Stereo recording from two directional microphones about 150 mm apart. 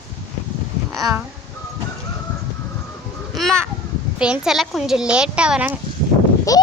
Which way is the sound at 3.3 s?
Centre (ahead or behind).